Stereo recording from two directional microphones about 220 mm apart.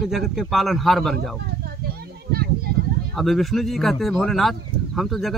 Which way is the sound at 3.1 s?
Centre (ahead or behind).